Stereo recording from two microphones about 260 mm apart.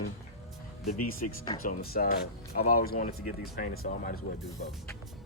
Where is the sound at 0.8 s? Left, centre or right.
Left.